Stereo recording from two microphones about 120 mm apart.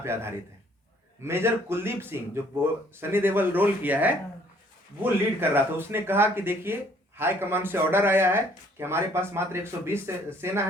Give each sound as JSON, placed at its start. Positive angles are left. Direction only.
{"t": 0.0, "sound": "speech", "side_deg": -20}
{"t": 5.4, "sound": "speech", "side_deg": -20}